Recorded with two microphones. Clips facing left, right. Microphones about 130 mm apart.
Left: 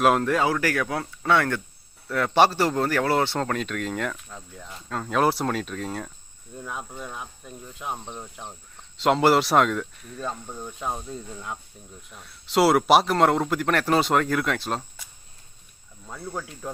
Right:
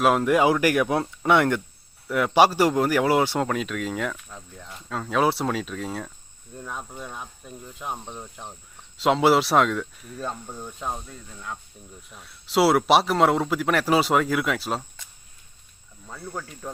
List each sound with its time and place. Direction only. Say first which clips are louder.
0.0 s speech: even; centre (ahead or behind)
0.3 s speech: right 4 dB; 15° right (ahead or behind); by 11.0 s centre (ahead or behind)
11.1 s speech: left 3 dB; 15° left (ahead or behind)
12.0 s speech: even; centre (ahead or behind)
16.0 s speech: left 1 dB; 5° left (ahead or behind)